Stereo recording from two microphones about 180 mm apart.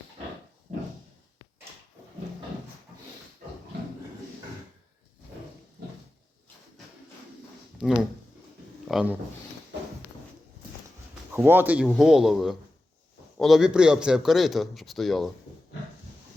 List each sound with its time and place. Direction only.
7.8 s speech: centre (ahead or behind)
11.3 s a man's voice: 10° right (ahead or behind)